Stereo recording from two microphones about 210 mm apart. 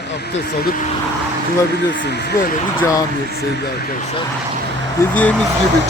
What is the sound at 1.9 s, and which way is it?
Speech, 55° left (ahead or behind).